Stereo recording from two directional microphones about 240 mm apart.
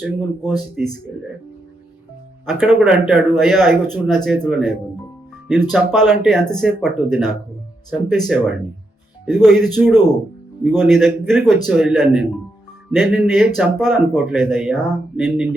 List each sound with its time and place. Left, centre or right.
0.0 s speech: centre
2.5 s speech: centre